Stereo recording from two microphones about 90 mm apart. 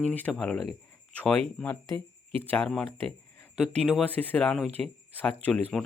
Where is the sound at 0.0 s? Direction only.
20° left (ahead or behind).